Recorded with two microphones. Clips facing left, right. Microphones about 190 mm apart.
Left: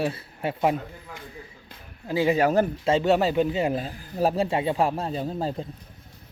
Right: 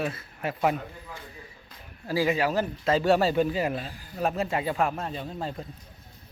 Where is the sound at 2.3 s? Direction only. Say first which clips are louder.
Left 5 dB; 50° left (ahead or behind).